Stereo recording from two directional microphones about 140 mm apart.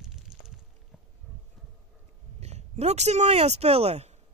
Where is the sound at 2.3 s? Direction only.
50° right (ahead or behind).